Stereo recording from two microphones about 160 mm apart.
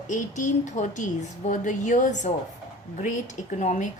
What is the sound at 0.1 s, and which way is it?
Speech, 50° left (ahead or behind).